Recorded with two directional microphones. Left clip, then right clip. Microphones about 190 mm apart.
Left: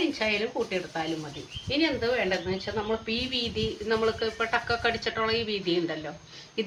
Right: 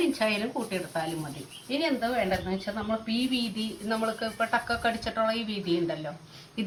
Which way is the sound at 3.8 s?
25° left (ahead or behind).